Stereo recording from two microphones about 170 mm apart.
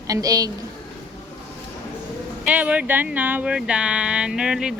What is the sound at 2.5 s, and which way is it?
Speech, 10° right (ahead or behind).